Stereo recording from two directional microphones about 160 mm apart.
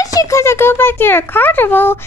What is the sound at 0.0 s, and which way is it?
A child's voice, 20° left (ahead or behind).